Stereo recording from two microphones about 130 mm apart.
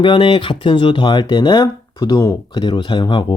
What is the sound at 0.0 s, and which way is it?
Speech, 40° left (ahead or behind).